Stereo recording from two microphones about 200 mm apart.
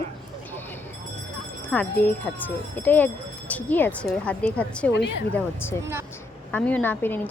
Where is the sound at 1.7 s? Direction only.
10° left (ahead or behind).